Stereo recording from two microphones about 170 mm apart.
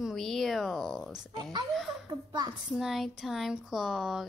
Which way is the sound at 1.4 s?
25° right (ahead or behind).